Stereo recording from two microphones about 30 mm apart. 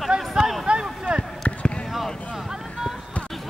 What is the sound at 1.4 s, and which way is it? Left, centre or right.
Basketball bounce, left.